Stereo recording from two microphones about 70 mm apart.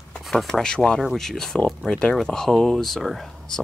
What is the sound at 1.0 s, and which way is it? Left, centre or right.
Speech, centre.